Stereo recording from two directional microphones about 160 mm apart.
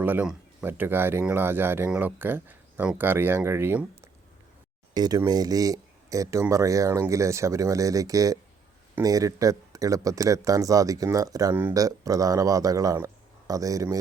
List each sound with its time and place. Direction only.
0.0 s speech: 10° right (ahead or behind)
4.9 s speech: 25° right (ahead or behind)